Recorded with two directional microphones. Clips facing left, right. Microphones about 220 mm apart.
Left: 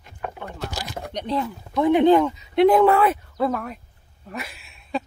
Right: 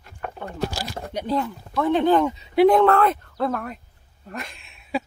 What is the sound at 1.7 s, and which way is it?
Speech, 15° left (ahead or behind).